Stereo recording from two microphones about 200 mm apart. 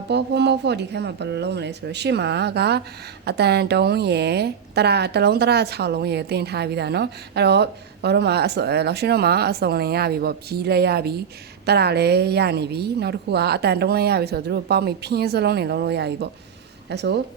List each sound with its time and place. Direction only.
0.1 s a woman's voice: 60° right (ahead or behind)